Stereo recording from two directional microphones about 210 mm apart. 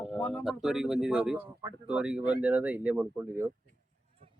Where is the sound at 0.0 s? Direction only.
5° left (ahead or behind).